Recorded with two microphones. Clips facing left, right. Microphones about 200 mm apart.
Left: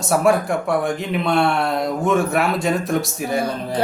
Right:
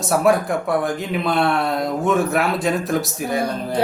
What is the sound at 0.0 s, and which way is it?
Speech, centre (ahead or behind).